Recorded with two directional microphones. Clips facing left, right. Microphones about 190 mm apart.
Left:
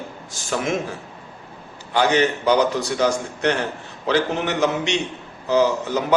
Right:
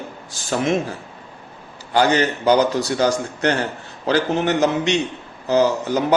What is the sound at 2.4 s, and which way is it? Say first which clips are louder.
Speech: right 2 dB; 35° right (ahead or behind).